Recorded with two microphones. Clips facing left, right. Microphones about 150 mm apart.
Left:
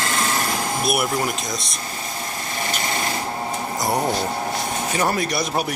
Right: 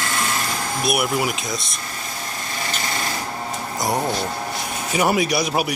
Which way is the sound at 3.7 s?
Centre (ahead or behind).